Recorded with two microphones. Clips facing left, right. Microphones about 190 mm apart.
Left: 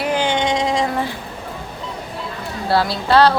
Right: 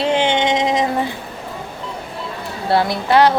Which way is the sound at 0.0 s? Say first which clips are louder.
Right 2 dB; 25° right (ahead or behind).